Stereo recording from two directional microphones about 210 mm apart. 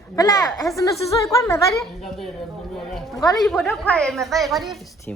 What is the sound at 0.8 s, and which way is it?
Speech, 15° left (ahead or behind).